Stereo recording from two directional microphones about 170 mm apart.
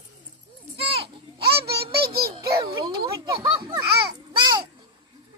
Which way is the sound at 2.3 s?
20° right (ahead or behind).